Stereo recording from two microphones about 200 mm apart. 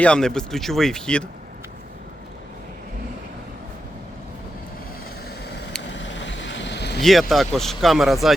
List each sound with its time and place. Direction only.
0.0 s speech: 5° left (ahead or behind)
5.9 s vehicle: 65° left (ahead or behind)
7.0 s speech: centre (ahead or behind)